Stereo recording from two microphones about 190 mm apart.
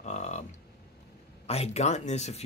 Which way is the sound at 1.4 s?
35° left (ahead or behind).